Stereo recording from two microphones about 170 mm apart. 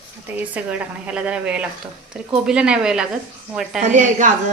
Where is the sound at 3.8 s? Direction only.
45° right (ahead or behind).